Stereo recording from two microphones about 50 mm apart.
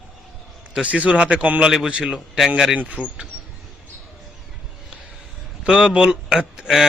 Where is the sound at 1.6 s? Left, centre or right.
Centre.